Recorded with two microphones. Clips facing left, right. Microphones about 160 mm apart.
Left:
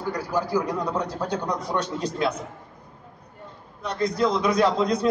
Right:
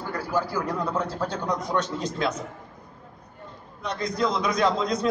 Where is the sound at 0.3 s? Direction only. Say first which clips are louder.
Left 2 dB; 15° left (ahead or behind).